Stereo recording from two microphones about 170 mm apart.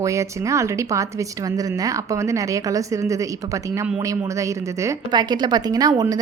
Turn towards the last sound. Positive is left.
turn(degrees=-20)  # may be behind; listen again after turning